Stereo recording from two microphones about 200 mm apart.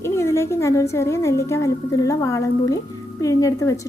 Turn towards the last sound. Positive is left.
turn(degrees=15)  # may be behind; listen again after turning